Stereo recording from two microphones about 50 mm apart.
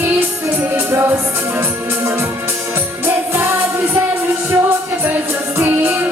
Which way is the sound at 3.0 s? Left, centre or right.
Right.